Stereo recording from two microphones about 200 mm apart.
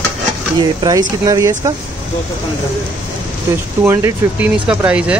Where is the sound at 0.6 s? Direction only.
20° right (ahead or behind).